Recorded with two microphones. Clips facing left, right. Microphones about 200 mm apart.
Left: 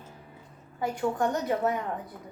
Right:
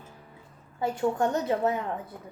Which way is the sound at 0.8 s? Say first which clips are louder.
Right 2 dB; 25° right (ahead or behind).